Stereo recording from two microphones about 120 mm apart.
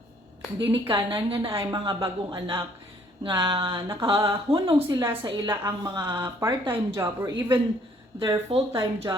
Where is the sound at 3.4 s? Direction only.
45° right (ahead or behind).